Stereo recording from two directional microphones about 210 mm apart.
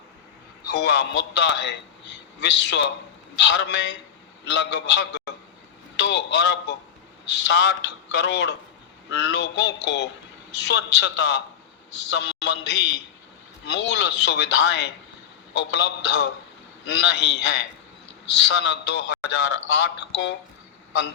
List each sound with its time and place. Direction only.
0.7 s a man's voice: 55° left (ahead or behind)